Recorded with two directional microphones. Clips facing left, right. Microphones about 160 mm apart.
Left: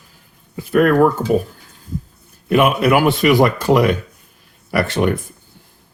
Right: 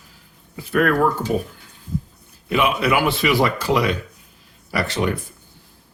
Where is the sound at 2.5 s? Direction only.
50° left (ahead or behind).